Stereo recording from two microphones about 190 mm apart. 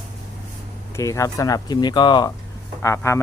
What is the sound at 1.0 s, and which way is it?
Speech, 15° left (ahead or behind).